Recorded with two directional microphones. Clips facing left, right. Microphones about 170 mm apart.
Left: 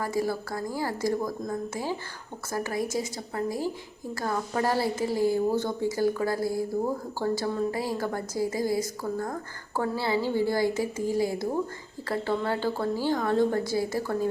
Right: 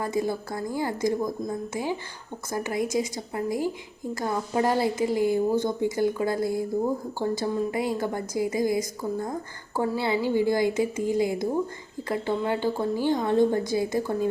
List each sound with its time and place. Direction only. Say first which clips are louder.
0.0 s a woman's voice: right 1 dB; 20° right (ahead or behind)